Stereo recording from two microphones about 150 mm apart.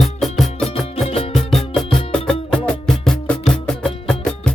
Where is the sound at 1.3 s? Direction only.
Centre (ahead or behind).